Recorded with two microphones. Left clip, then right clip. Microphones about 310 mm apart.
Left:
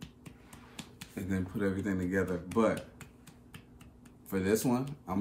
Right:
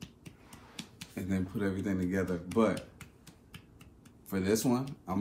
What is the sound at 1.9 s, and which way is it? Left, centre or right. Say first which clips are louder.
Speech: left 1 dB; centre.